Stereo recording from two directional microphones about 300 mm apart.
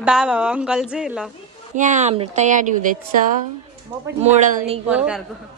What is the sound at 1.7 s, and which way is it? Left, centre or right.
Speech, right.